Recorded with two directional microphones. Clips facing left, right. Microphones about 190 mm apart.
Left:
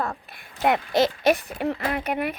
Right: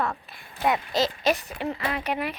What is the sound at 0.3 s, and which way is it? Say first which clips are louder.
Speech: left 5 dB; 60° left (ahead or behind).